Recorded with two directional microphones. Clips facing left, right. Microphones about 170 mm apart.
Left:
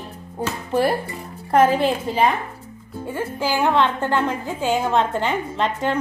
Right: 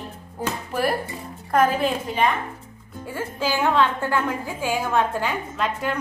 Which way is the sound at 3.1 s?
15° left (ahead or behind).